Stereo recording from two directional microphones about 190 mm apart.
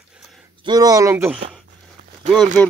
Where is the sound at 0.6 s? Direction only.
20° right (ahead or behind).